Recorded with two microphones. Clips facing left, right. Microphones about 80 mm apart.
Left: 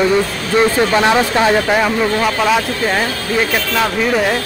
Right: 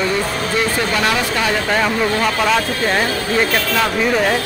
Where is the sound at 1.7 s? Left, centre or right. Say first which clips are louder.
Left 2 dB; centre.